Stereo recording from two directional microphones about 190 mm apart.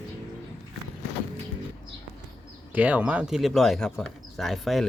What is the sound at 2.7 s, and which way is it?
Speech, 5° right (ahead or behind).